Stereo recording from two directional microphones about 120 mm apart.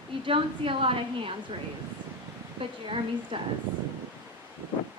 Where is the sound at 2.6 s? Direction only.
45° right (ahead or behind).